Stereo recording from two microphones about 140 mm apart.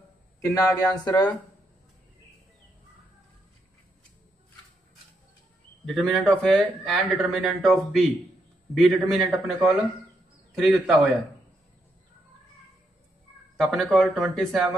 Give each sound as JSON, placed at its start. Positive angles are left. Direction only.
{"t": 0.4, "sound": "speech", "side_deg": 25}
{"t": 5.9, "sound": "a man's voice", "side_deg": 0}
{"t": 13.6, "sound": "a man's voice", "side_deg": 0}